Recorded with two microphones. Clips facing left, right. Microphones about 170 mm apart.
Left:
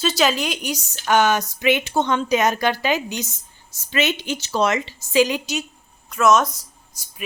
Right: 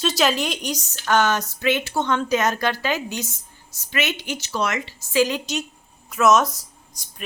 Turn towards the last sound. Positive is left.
turn(degrees=5)  # may be behind; listen again after turning